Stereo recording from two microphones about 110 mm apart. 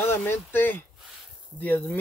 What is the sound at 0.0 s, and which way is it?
Speech, 20° left (ahead or behind).